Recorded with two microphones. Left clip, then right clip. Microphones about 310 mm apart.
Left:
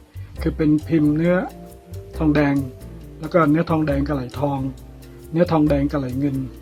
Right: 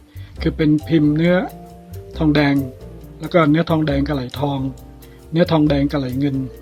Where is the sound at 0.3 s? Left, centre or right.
Right.